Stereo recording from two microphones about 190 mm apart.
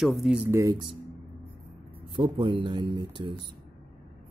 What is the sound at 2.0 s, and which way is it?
Speech, 25° right (ahead or behind).